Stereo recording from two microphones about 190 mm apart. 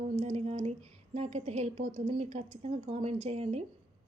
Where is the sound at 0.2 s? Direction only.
35° right (ahead or behind).